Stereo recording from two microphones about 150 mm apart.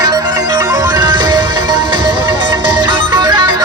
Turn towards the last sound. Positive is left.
turn(degrees=-30)  # may be behind; listen again after turning